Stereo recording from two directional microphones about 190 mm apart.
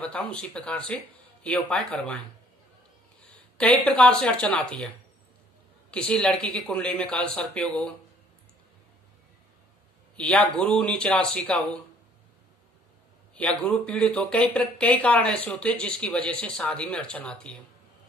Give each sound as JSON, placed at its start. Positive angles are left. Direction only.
{"t": 0.0, "sound": "speech", "side_deg": 5}
{"t": 3.8, "sound": "speech", "side_deg": 10}
{"t": 5.9, "sound": "speech", "side_deg": 5}
{"t": 10.1, "sound": "speech", "side_deg": 5}
{"t": 13.3, "sound": "speech", "side_deg": 5}